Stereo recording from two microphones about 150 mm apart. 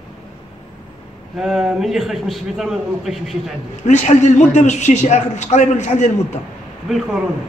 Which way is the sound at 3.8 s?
55° left (ahead or behind).